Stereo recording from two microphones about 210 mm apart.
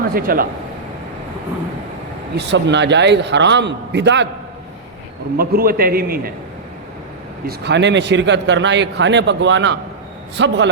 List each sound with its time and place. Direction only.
0.1 s a man's voice: 45° right (ahead or behind)
2.4 s speech: 55° right (ahead or behind)
5.4 s a man's voice: 45° right (ahead or behind)
7.4 s speech: 55° right (ahead or behind)